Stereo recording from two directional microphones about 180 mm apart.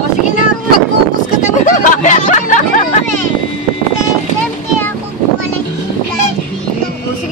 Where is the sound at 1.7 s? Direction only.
45° left (ahead or behind).